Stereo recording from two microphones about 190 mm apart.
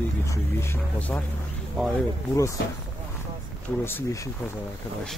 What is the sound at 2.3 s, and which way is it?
Speech, 15° left (ahead or behind).